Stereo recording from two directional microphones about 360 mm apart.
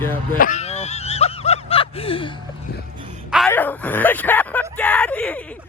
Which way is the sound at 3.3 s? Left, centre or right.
Centre.